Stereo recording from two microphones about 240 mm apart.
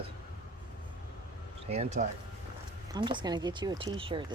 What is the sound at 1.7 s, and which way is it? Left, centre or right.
Speech, right.